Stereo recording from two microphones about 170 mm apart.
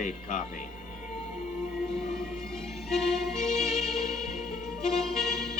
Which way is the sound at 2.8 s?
Centre (ahead or behind).